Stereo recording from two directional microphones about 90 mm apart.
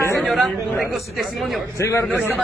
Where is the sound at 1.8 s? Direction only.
35° left (ahead or behind).